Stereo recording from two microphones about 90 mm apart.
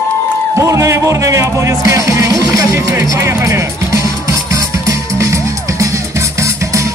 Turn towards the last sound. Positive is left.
turn(degrees=-35)  # may be behind; listen again after turning